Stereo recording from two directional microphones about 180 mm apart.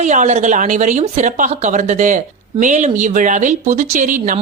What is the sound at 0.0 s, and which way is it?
Speech, 40° right (ahead or behind).